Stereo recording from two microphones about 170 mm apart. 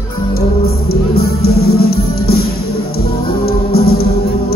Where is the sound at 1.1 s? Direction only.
65° left (ahead or behind).